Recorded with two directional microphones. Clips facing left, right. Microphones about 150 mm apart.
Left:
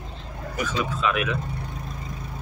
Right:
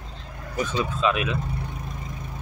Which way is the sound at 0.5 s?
25° right (ahead or behind).